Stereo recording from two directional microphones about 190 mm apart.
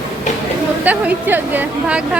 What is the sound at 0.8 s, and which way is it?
A woman's voice, 10° right (ahead or behind).